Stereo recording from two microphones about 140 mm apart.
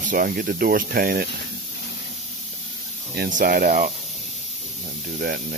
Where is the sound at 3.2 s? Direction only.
80° right.